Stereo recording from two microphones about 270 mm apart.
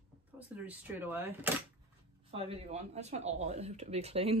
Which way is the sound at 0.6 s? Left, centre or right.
Centre.